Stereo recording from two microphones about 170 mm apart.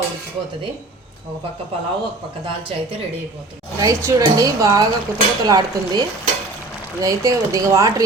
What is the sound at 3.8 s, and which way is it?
Speech, 15° right (ahead or behind).